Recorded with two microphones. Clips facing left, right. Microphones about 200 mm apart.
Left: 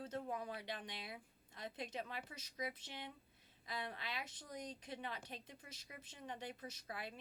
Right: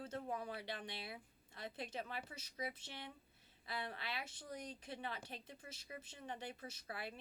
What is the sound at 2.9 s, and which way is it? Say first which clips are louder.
Speech: left 1 dB; 15° left (ahead or behind).